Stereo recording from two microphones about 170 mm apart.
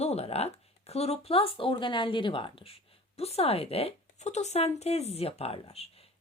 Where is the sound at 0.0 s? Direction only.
40° left (ahead or behind).